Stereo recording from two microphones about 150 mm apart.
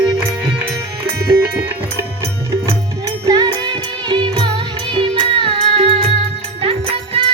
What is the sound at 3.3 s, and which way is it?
Music, 30° right (ahead or behind).